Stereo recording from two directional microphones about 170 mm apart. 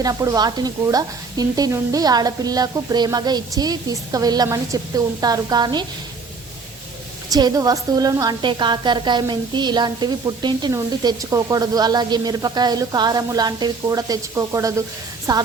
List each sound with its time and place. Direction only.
0.0 s a woman's voice: 20° right (ahead or behind)
7.3 s a woman's voice: 25° right (ahead or behind)